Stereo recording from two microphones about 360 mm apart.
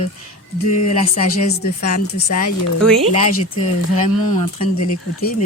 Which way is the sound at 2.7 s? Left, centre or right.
Centre.